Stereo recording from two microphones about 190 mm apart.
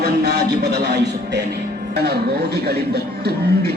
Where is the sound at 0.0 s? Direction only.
55° right (ahead or behind).